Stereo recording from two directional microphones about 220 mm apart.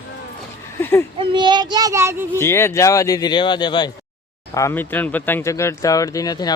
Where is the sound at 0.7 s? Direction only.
10° left (ahead or behind).